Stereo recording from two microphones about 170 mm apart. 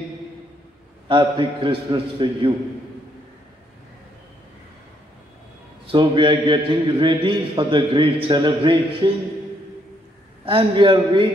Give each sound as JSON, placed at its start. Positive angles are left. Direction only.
{"t": 1.0, "sound": "a man's voice", "side_deg": -30}
{"t": 5.9, "sound": "a man's voice", "side_deg": -30}
{"t": 10.4, "sound": "a man's voice", "side_deg": -30}